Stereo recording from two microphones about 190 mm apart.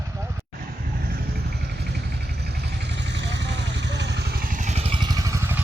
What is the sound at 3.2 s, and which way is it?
Vehicle, 65° right (ahead or behind).